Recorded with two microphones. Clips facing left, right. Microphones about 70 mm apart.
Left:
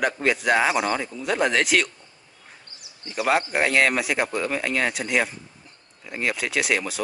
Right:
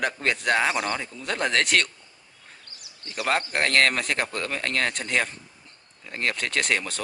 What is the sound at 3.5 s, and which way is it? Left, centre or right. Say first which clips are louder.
Speech: left 2 dB; centre.